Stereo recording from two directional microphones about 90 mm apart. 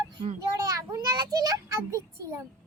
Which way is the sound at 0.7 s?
40° right (ahead or behind).